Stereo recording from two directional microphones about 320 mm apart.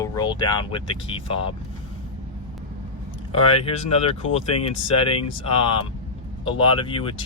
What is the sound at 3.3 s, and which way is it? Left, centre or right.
Speech, centre.